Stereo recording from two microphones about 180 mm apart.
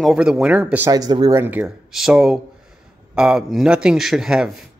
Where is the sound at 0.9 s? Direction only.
20° right (ahead or behind); by 4.5 s 5° right (ahead or behind).